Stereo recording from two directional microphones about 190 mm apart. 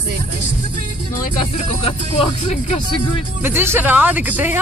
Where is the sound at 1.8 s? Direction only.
30° left (ahead or behind).